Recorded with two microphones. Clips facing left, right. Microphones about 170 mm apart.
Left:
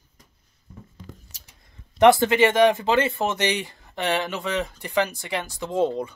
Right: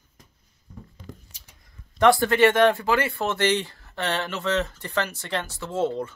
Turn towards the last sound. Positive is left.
turn(degrees=15)  # may be behind; listen again after turning